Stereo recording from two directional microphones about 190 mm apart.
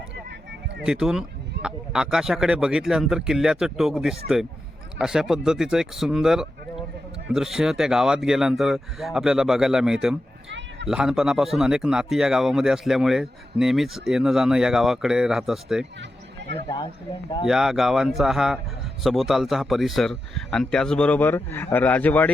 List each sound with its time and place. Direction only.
0.9 s speech: 5° right (ahead or behind)
16.6 s a man's voice: 25° left (ahead or behind)
17.4 s speech: centre (ahead or behind)